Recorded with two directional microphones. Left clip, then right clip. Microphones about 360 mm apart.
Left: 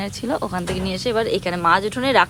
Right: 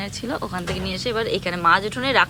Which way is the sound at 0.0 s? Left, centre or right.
Centre.